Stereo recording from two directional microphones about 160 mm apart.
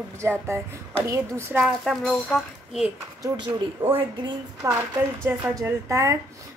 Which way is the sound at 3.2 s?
25° right (ahead or behind).